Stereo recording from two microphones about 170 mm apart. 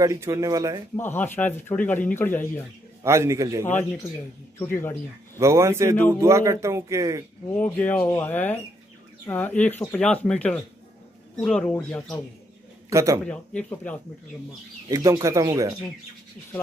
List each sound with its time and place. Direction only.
0.0 s speech: 20° right (ahead or behind)
0.9 s speech: 10° left (ahead or behind)
3.0 s speech: 15° right (ahead or behind)
4.6 s speech: 15° left (ahead or behind)
5.4 s speech: 15° right (ahead or behind)
7.5 s speech: 10° left (ahead or behind)
11.7 s speech: 15° left (ahead or behind)
12.9 s speech: 20° right (ahead or behind)
13.2 s speech: 5° left (ahead or behind)
14.9 s speech: 20° right (ahead or behind)